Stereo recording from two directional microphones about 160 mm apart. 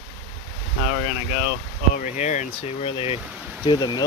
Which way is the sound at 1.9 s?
50° left (ahead or behind).